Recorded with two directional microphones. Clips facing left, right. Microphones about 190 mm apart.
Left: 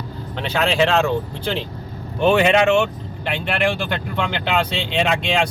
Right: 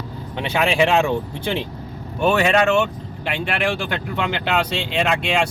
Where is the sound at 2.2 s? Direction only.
Centre (ahead or behind).